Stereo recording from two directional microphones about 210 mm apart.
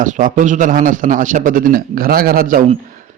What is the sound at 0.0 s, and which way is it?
A man's voice, 40° right (ahead or behind).